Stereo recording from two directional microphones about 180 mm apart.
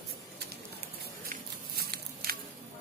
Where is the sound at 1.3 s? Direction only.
60° right (ahead or behind).